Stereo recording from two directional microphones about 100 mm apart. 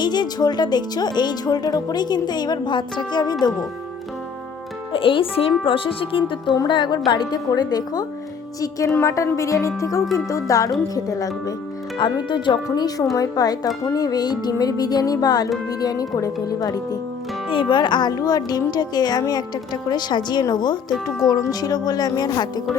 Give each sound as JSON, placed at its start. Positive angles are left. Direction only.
{"t": 0.0, "sound": "speech", "side_deg": 45}
{"t": 4.9, "sound": "speech", "side_deg": 60}
{"t": 9.0, "sound": "music", "side_deg": 30}
{"t": 11.9, "sound": "speech", "side_deg": 50}
{"t": 12.6, "sound": "music", "side_deg": 40}
{"t": 17.5, "sound": "speech", "side_deg": 55}
{"t": 21.2, "sound": "music", "side_deg": 40}